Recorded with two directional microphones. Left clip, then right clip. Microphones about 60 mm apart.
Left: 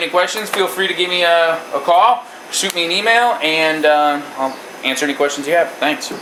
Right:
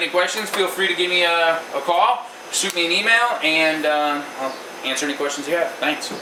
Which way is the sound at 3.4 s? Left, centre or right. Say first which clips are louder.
Left 3 dB; left.